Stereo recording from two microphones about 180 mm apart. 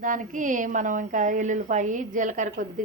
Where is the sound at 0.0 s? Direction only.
45° right (ahead or behind).